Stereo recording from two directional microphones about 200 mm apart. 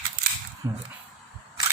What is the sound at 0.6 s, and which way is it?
Speech, 15° right (ahead or behind).